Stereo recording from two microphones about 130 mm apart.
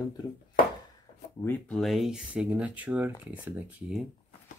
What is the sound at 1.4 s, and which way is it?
Speech, 5° left (ahead or behind).